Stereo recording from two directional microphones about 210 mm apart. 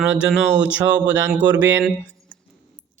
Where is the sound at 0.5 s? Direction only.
60° right (ahead or behind).